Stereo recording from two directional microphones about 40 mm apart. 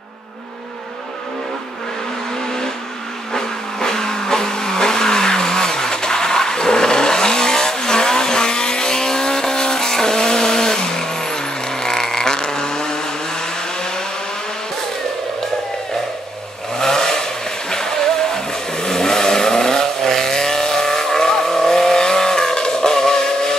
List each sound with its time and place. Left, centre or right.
3.3 s vehicle: centre
16.7 s vehicle: centre